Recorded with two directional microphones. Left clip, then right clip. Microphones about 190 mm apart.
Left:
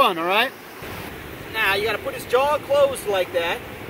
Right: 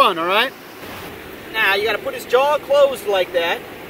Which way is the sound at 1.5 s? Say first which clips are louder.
Right 4 dB; 5° left (ahead or behind).